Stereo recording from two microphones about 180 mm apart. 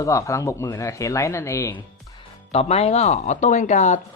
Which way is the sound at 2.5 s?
35° left (ahead or behind).